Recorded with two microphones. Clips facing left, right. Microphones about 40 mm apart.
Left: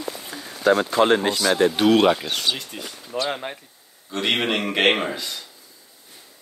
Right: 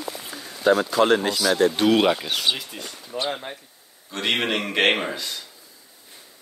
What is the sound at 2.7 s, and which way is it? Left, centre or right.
Speech, centre.